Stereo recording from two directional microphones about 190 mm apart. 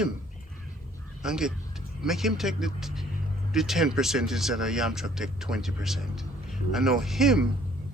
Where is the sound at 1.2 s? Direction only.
5° right (ahead or behind).